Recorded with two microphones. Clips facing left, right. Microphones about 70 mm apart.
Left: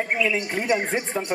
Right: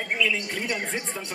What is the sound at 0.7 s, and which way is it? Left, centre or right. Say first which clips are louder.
Speech: left 7 dB; left.